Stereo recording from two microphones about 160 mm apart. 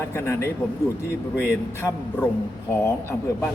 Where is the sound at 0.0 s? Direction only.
15° left (ahead or behind).